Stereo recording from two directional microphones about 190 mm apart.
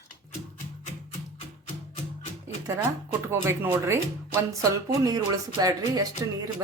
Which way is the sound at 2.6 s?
15° right (ahead or behind).